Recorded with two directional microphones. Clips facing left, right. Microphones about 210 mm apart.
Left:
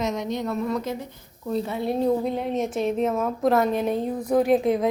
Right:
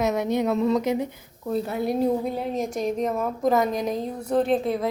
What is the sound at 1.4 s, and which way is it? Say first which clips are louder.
A woman's voice: right 1 dB; centre (ahead or behind).